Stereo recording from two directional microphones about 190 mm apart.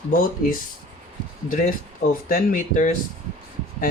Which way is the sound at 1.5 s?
45° left (ahead or behind).